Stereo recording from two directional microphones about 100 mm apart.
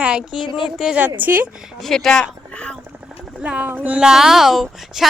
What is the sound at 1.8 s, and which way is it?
Speech, 5° left (ahead or behind).